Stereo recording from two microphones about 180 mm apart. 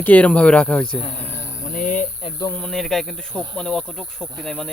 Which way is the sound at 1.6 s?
45° left (ahead or behind).